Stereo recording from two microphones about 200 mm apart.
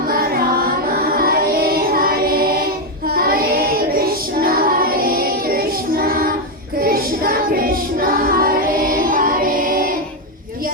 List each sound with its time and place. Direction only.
1.0 s music: 50° right (ahead or behind)
3.2 s child singing: 50° right (ahead or behind)